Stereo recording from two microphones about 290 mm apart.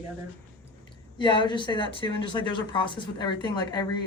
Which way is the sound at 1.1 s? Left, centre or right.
Centre.